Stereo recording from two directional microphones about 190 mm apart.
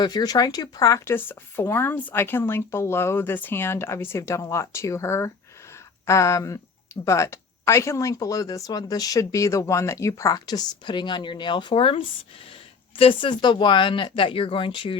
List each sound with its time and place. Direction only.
0.0 s speech: 20° left (ahead or behind)